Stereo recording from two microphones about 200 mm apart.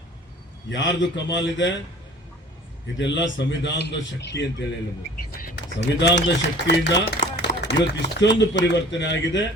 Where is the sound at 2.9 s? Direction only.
65° left (ahead or behind).